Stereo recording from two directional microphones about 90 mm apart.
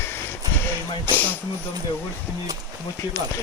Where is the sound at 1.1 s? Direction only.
20° left (ahead or behind).